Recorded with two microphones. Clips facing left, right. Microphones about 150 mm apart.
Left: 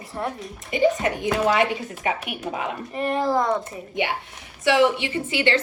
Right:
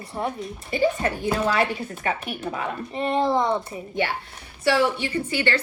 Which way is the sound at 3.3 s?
20° right (ahead or behind).